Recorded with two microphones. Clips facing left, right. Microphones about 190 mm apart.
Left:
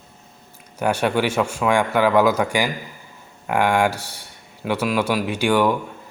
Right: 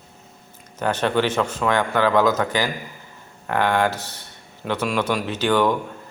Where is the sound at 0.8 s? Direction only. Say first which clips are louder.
Left 1 dB; 10° left (ahead or behind).